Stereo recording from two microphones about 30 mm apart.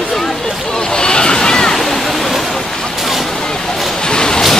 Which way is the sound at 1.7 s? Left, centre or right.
Centre.